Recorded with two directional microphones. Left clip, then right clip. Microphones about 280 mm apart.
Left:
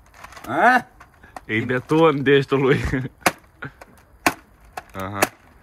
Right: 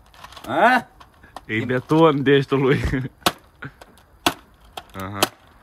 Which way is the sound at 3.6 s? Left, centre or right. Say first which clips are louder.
Left 2 dB; centre.